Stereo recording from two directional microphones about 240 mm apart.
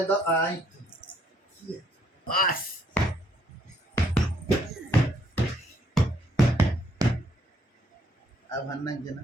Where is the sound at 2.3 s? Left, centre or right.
Left.